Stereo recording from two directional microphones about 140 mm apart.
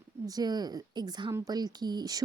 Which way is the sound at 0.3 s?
30° right (ahead or behind).